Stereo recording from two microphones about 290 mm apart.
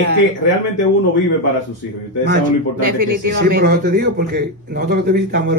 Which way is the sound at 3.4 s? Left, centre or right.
Right.